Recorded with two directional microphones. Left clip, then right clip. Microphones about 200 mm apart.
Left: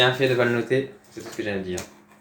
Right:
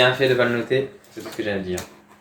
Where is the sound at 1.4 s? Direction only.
5° left (ahead or behind).